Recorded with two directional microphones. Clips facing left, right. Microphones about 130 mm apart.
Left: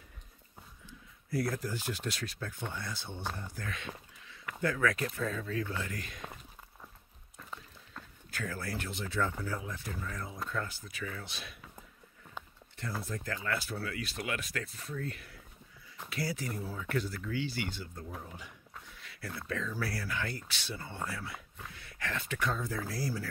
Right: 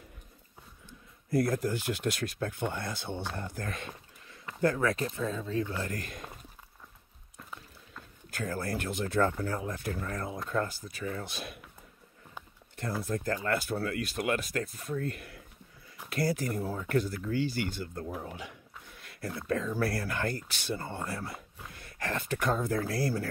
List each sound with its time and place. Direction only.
1.3 s speech: 45° right (ahead or behind); by 3.3 s 65° right (ahead or behind)
3.5 s speech: 45° right (ahead or behind); by 5.8 s 25° right (ahead or behind)
5.8 s speech: 45° right (ahead or behind)
8.3 s speech: 40° right (ahead or behind)
13.1 s speech: 45° right (ahead or behind)
18.0 s speech: 75° right (ahead or behind)
18.9 s a sound: 50° right (ahead or behind)
19.4 s speech: 45° right (ahead or behind)